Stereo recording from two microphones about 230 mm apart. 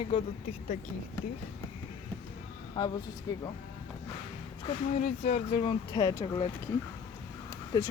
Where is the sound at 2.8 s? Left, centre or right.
Centre.